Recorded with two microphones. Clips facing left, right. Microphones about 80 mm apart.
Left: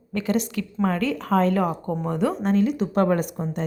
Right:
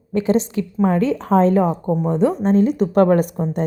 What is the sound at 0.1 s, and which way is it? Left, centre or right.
A woman's voice, right.